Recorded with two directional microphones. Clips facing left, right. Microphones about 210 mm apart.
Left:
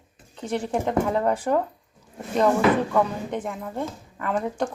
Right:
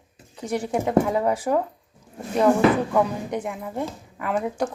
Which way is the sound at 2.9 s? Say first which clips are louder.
Right 1 dB; 10° right (ahead or behind).